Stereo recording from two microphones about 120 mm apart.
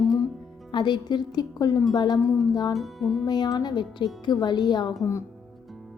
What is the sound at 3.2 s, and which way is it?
A woman's voice, 35° left (ahead or behind).